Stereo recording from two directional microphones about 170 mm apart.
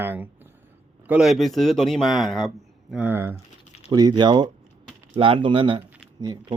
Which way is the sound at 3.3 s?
35° left (ahead or behind).